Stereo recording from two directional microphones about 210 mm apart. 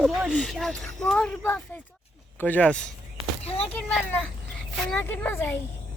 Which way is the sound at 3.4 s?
30° left (ahead or behind).